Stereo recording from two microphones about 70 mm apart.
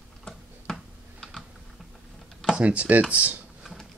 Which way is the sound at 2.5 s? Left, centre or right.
Centre.